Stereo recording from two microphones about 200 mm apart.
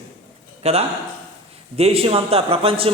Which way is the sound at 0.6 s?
30° right (ahead or behind).